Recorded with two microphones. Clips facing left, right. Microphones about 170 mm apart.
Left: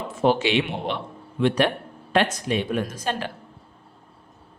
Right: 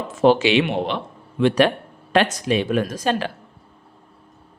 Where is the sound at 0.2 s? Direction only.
90° right.